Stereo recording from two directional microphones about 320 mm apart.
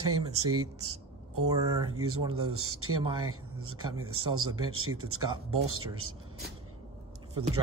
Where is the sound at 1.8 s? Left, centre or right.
Right.